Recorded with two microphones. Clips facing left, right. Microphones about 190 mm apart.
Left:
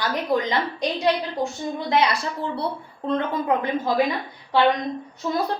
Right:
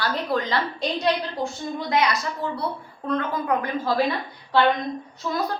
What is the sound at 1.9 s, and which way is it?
A woman's voice, 30° left (ahead or behind).